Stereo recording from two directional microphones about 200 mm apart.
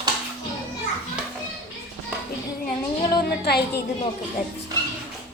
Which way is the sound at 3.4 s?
55° left (ahead or behind).